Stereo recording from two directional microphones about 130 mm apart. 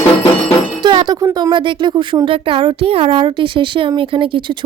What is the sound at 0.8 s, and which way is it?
Speech, 35° right (ahead or behind).